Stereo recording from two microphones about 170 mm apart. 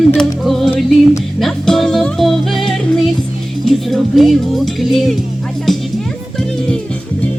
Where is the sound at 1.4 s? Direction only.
Centre (ahead or behind).